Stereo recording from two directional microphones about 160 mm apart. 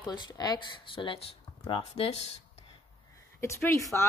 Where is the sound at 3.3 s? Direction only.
15° left (ahead or behind).